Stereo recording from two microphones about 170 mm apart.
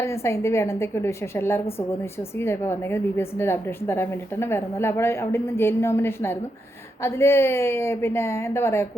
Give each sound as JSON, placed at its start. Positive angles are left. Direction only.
{"t": 0.0, "sound": "a woman's voice", "side_deg": 15}